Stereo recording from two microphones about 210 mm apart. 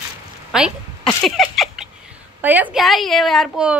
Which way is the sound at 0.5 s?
Centre (ahead or behind).